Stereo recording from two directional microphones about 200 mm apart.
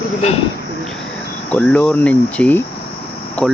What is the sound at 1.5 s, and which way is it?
Speech, 5° left (ahead or behind).